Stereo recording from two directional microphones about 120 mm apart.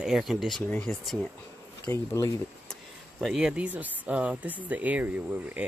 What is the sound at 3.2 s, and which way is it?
Speech, 5° right (ahead or behind).